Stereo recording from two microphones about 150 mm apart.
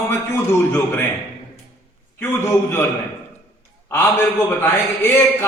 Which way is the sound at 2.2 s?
15° left (ahead or behind).